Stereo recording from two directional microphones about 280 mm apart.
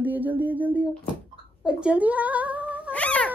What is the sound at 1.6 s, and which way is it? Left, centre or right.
Speech, centre.